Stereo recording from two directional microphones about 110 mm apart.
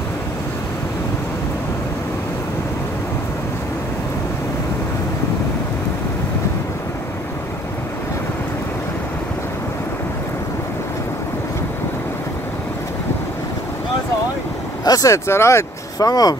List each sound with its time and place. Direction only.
14.9 s speech: 30° left (ahead or behind)